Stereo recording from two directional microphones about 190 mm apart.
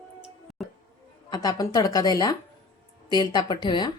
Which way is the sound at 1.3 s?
20° left (ahead or behind).